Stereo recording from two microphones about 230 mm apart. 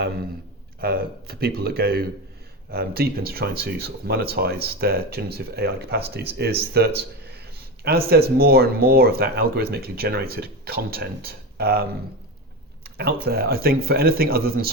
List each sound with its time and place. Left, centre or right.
0.8 s a man's voice: right
13.0 s a man's voice: right